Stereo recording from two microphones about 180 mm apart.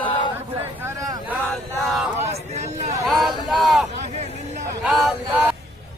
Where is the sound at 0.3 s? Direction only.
10° right (ahead or behind).